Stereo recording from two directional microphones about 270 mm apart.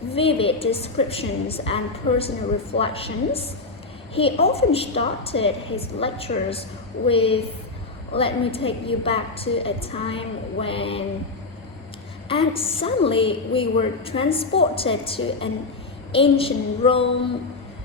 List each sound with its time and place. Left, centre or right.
0.1 s a woman's voice: left
12.3 s a woman's voice: left